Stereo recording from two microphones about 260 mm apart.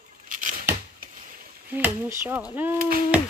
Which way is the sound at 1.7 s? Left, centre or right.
Centre.